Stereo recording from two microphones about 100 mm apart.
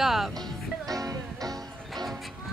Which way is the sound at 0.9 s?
35° right (ahead or behind).